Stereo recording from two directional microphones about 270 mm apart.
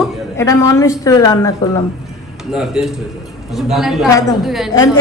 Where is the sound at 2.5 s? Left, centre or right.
Centre.